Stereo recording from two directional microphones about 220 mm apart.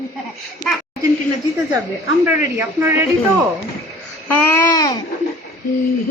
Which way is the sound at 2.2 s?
10° right (ahead or behind).